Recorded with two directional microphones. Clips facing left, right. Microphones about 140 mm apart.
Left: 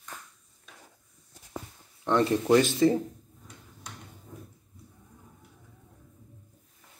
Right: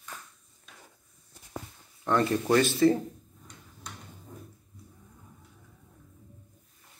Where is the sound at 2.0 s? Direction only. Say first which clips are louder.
Left 1 dB; 15° left (ahead or behind).